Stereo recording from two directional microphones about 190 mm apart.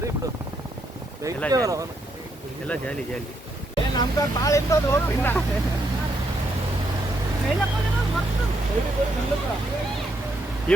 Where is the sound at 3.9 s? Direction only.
20° left (ahead or behind).